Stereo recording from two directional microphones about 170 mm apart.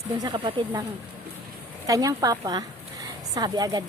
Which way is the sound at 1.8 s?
20° right (ahead or behind).